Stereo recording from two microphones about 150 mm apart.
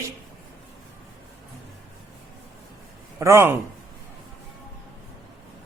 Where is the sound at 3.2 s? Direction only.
20° right (ahead or behind).